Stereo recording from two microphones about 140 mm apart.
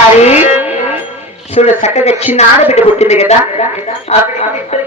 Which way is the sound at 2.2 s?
15° right (ahead or behind).